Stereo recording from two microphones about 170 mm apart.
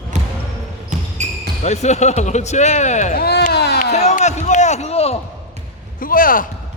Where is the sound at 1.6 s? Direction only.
40° left (ahead or behind).